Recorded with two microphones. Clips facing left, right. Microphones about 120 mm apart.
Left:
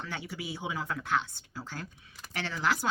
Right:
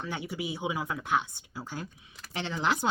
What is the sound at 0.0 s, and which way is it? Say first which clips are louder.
Speech: right 4 dB; 15° right (ahead or behind).